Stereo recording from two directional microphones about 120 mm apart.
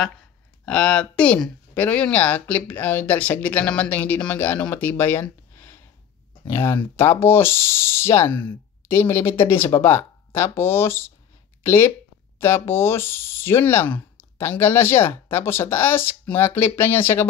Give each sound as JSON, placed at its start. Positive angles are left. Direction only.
{"t": 0.7, "sound": "speech", "side_deg": 10}